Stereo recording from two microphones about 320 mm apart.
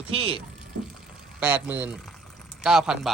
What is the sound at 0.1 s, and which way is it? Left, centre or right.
Speech, centre.